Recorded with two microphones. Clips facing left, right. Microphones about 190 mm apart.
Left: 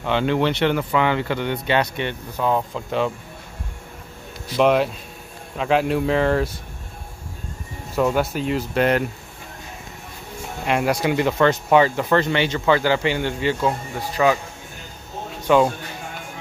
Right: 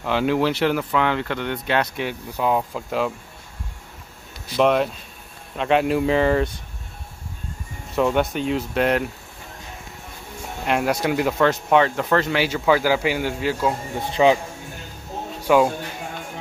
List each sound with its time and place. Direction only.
0.0 s speech: 5° right (ahead or behind)
4.6 s speech: centre (ahead or behind)
7.9 s speech: centre (ahead or behind)
10.6 s speech: centre (ahead or behind)
13.9 s speech: 20° right (ahead or behind)
15.4 s speech: 5° right (ahead or behind)